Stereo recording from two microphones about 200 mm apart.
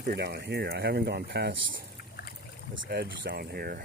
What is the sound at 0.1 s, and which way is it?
Speech, 55° right (ahead or behind).